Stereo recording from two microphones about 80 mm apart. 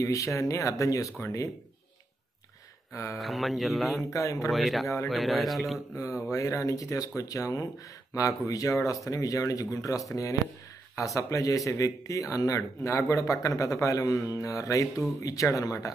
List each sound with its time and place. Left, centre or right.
0.0 s speech: left
2.9 s speech: left
3.2 s speech: centre
4.1 s speech: left
4.5 s speech: centre
6.3 s speech: left